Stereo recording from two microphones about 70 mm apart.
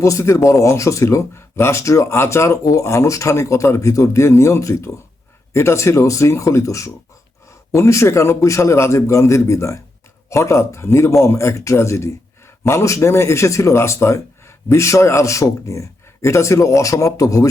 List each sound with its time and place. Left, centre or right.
0.0 s speech: left